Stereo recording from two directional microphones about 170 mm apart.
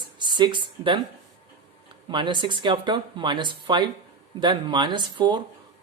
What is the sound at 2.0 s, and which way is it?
Speech, 25° right (ahead or behind).